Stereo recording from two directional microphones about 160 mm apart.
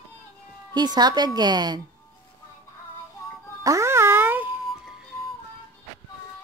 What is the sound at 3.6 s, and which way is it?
Music, 20° right (ahead or behind).